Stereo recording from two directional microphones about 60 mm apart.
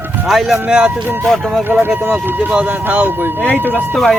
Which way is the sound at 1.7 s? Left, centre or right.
Right.